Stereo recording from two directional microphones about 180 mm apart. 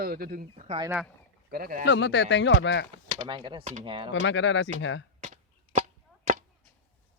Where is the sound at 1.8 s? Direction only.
75° left (ahead or behind).